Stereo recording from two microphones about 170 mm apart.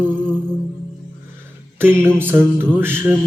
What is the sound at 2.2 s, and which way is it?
Mantra, 10° right (ahead or behind).